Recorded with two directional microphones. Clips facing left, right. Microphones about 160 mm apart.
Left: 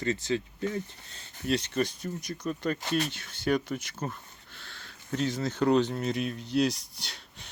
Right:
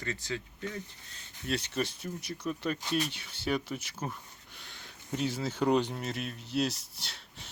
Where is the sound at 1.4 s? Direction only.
5° right (ahead or behind).